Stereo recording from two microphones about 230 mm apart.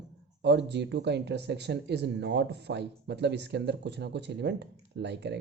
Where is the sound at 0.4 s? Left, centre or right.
Right.